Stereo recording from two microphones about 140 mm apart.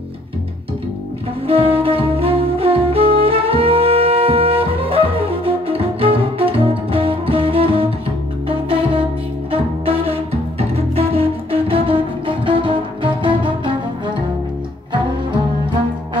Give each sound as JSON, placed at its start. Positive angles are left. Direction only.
{"t": 1.5, "sound": "saxophone", "side_deg": -40}
{"t": 8.5, "sound": "music", "side_deg": -40}